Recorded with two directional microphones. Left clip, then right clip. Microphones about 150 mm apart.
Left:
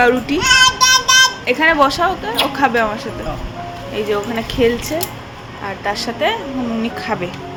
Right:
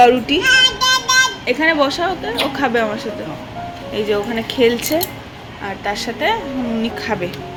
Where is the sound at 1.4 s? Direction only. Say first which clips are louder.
Left 2 dB; 5° left (ahead or behind); by 5.0 s 15° right (ahead or behind).